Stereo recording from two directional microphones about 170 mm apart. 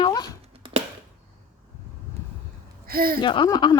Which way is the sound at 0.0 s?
25° left (ahead or behind).